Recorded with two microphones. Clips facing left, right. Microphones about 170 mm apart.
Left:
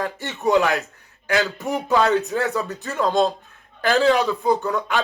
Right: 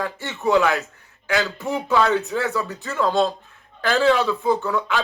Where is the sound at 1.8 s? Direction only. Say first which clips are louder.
Left 1 dB; 40° left (ahead or behind).